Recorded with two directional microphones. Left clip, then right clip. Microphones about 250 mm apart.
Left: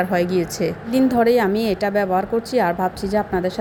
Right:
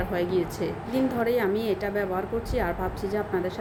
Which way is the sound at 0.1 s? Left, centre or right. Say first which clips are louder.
Left 7 dB; left.